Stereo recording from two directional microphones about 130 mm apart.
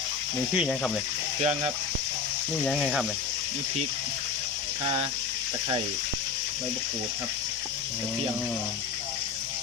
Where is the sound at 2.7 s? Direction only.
5° right (ahead or behind).